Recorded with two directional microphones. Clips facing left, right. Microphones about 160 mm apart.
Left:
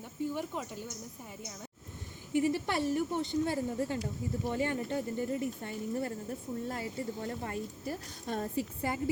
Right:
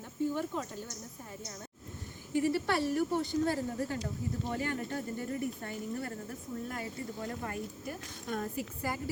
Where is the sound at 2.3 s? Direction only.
15° left (ahead or behind).